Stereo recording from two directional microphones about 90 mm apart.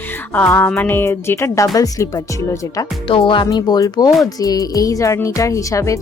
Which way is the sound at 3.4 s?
45° left (ahead or behind).